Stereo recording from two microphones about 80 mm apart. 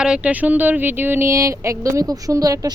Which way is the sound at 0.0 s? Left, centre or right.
Centre.